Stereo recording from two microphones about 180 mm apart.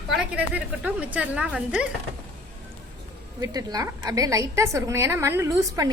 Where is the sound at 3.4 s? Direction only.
20° right (ahead or behind).